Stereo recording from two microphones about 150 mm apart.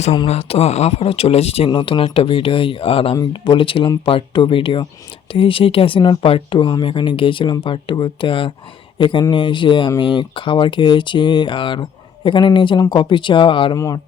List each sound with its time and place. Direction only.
0.3 s speech: 40° left (ahead or behind)
13.7 s a man's voice: 20° left (ahead or behind)